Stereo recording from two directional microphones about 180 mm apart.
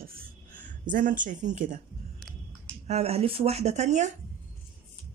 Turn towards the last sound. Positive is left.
turn(degrees=-40)  # may be behind; listen again after turning